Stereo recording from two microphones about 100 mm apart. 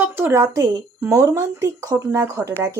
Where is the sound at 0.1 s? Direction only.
25° right (ahead or behind).